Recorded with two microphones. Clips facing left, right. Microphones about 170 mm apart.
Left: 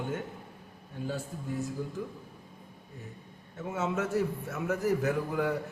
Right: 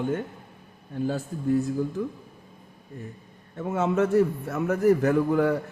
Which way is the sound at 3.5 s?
55° right (ahead or behind).